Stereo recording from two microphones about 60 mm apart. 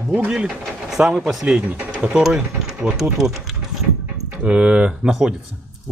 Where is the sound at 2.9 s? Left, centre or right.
Centre.